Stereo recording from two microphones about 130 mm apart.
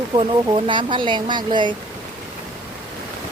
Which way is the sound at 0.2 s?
40° right (ahead or behind).